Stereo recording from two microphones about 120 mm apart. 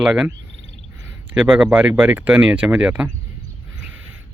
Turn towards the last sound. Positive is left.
turn(degrees=-10)  # may be behind; listen again after turning